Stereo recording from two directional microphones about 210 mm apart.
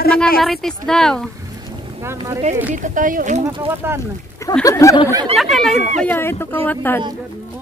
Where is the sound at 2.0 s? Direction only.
15° right (ahead or behind).